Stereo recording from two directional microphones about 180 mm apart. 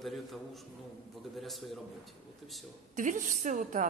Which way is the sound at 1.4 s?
Centre (ahead or behind).